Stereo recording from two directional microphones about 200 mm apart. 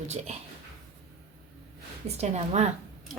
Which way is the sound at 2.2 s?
35° right (ahead or behind).